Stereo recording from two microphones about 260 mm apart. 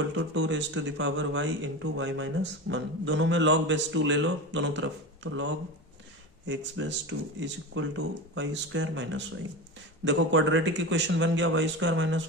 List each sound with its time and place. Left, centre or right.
0.0 s speech: right